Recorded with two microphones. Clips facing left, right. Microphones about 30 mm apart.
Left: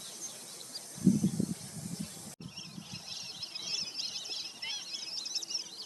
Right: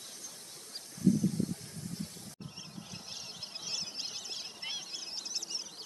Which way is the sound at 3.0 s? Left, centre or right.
Centre.